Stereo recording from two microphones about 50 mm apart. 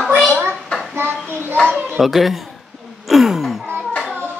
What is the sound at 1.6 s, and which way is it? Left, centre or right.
Children playing, centre.